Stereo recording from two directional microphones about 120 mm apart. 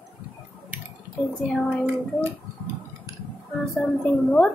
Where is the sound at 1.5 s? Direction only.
5° left (ahead or behind).